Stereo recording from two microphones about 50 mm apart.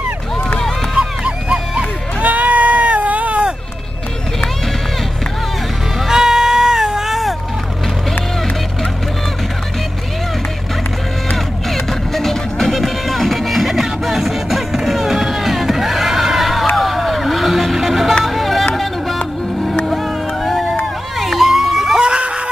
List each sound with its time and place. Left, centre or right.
0.9 s music: centre
2.2 s bleat: right
5.9 s music: centre
11.3 s music: centre
16.7 s vehicle: centre
18.2 s music: centre
19.1 s music: left
20.4 s run: centre
22.0 s screaming: centre